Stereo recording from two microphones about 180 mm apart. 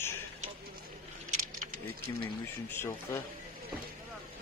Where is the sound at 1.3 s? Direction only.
45° right (ahead or behind).